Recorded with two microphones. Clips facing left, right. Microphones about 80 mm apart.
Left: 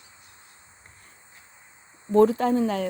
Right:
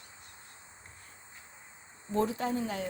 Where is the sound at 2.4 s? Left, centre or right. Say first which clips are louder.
Left 10 dB; left.